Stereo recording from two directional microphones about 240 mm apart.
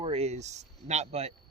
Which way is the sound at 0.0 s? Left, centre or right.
Right.